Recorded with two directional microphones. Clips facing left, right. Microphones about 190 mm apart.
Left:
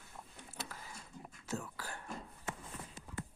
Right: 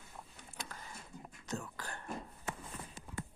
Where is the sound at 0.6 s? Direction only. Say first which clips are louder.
Left 1 dB; 5° left (ahead or behind).